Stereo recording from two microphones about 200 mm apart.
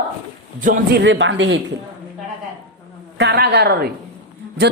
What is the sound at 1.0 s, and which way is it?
Speech, 65° right (ahead or behind).